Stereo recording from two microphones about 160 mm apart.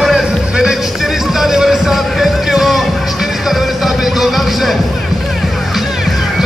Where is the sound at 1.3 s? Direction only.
Centre (ahead or behind).